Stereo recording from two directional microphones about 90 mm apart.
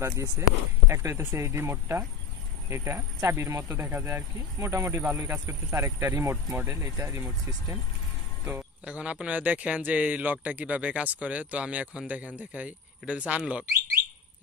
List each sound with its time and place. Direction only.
0.0 s speech: 35° right (ahead or behind)
3.7 s speech: 25° right (ahead or behind)
8.8 s speech: 15° right (ahead or behind)